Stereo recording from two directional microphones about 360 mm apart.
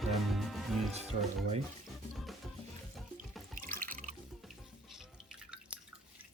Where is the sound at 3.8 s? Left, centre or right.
Right.